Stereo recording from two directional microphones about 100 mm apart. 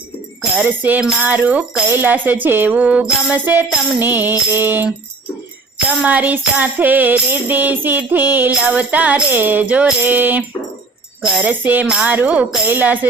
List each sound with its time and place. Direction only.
0.6 s music: 20° right (ahead or behind)
6.0 s music: 15° right (ahead or behind)
11.2 s speech: 5° right (ahead or behind)
11.4 s music: 20° right (ahead or behind)